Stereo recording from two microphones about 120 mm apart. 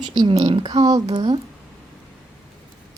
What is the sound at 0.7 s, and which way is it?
Speech, 30° right (ahead or behind).